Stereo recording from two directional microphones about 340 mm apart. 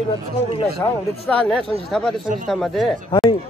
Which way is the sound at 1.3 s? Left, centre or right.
Centre.